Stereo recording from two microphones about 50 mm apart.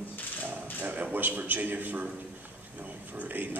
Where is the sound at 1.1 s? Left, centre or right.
Right.